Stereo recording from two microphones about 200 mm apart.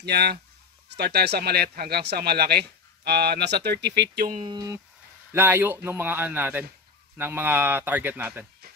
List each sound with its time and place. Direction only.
0.0 s speech: 55° right (ahead or behind)
4.5 s speech: 20° right (ahead or behind)